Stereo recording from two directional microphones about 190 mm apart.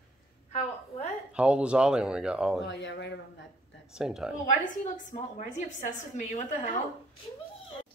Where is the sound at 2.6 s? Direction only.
65° left (ahead or behind).